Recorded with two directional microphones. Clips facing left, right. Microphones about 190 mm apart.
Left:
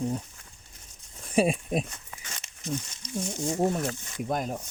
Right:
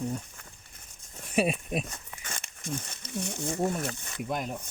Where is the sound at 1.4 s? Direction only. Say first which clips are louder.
Left 3 dB; 35° left (ahead or behind).